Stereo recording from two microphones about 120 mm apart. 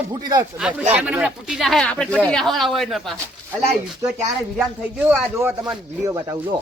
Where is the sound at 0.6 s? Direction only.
10° right (ahead or behind).